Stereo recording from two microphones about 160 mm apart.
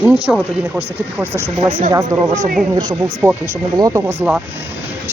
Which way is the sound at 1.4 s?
40° right (ahead or behind).